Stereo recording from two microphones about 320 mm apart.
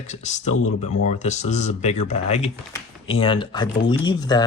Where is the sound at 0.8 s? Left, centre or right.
Left.